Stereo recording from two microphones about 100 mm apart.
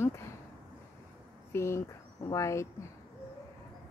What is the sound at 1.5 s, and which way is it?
Speech, 25° left (ahead or behind).